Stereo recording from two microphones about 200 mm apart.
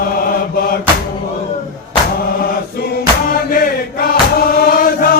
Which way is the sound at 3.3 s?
45° left (ahead or behind).